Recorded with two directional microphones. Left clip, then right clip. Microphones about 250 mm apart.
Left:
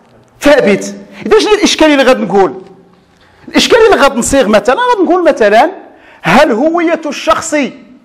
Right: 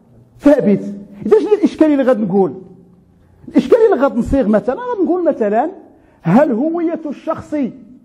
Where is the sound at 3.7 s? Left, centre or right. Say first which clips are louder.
Left 6 dB; centre.